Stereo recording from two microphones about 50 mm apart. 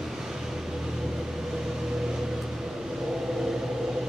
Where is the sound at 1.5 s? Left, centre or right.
Centre.